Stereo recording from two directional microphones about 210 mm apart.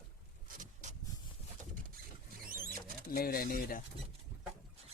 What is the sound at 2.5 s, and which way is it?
Rodents, 45° right (ahead or behind).